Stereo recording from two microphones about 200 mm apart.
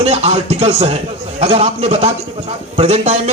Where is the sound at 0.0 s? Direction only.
30° right (ahead or behind).